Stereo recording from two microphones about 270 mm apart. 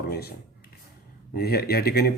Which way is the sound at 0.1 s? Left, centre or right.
Left.